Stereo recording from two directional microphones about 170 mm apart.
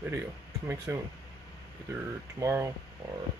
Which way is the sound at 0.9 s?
15° right (ahead or behind).